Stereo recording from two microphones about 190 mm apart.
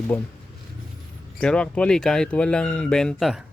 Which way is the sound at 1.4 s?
5° left (ahead or behind).